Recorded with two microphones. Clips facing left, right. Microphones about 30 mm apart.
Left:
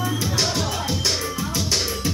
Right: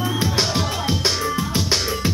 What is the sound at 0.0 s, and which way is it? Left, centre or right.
Music, right.